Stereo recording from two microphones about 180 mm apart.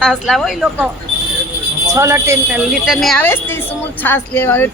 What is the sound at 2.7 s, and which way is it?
A woman's voice, centre (ahead or behind).